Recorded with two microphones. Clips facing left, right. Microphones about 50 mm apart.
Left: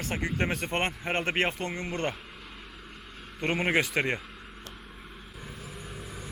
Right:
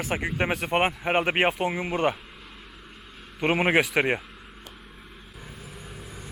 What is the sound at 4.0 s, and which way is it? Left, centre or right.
Speech, right.